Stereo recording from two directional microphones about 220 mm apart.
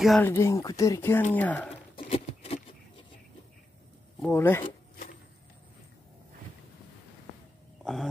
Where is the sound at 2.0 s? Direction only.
25° left (ahead or behind).